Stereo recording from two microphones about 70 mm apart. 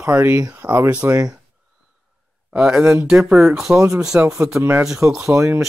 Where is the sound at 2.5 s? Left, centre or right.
Centre.